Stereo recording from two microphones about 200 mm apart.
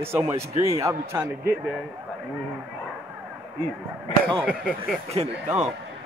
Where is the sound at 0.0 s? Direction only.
10° right (ahead or behind).